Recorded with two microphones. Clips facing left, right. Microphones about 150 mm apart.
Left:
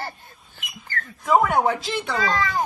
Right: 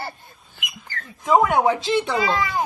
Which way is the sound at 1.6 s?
15° right (ahead or behind).